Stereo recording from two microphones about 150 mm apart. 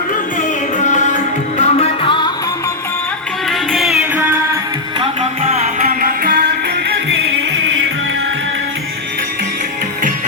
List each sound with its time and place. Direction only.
0.8 s music: 55° left (ahead or behind); by 2.3 s 30° left (ahead or behind)
3.5 s music: centre (ahead or behind)
5.8 s music: 70° right (ahead or behind)